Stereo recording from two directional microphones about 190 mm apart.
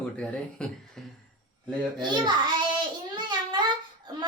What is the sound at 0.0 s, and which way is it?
Speech, 5° left (ahead or behind).